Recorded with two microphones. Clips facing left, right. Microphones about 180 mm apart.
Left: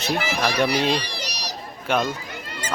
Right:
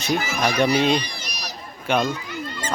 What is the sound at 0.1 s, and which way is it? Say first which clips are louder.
Speech: right 1 dB; 30° left (ahead or behind).